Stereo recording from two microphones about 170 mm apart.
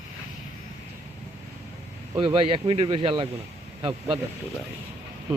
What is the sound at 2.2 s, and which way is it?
Speech, 35° right (ahead or behind).